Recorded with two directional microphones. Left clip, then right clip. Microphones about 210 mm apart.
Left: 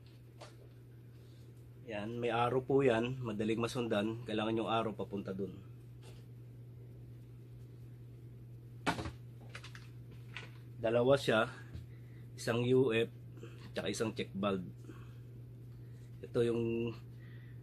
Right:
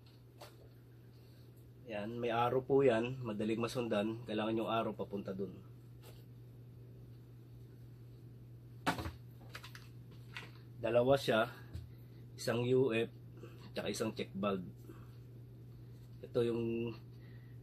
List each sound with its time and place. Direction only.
1.9 s speech: 30° left (ahead or behind)
10.8 s speech: 25° left (ahead or behind)
16.3 s speech: 35° left (ahead or behind)